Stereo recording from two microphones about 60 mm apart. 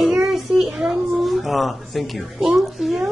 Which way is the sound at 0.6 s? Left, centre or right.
Centre.